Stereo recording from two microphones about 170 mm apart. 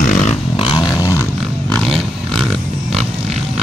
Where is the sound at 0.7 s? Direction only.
20° left (ahead or behind).